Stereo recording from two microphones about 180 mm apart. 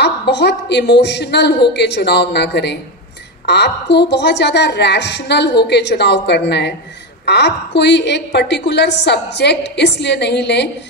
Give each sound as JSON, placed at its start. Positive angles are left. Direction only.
{"t": 0.0, "sound": "a woman's voice", "side_deg": 70}